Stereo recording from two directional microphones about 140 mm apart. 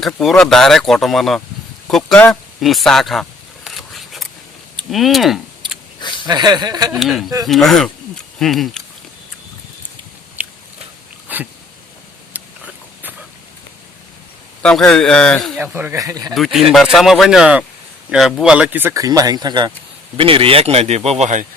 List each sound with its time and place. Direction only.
0.0 s speech: centre (ahead or behind)
2.6 s a sound: centre (ahead or behind)
4.9 s speech: centre (ahead or behind)
6.0 s a sound: 35° left (ahead or behind)
6.2 s speech: 30° right (ahead or behind)
7.0 s speech: centre (ahead or behind)
10.4 s biting: 10° right (ahead or behind)
11.3 s dog: 10° right (ahead or behind)
12.3 s a sound: 10° right (ahead or behind)
14.6 s speech: 5° left (ahead or behind)
15.5 s speech: 15° right (ahead or behind)
16.3 s speech: centre (ahead or behind); by 19.7 s 30° right (ahead or behind)
20.1 s speech: 40° right (ahead or behind)